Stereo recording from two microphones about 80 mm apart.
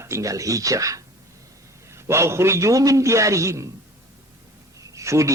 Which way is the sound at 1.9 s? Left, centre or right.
Right.